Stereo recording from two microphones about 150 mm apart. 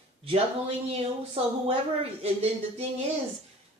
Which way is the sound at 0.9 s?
40° right (ahead or behind).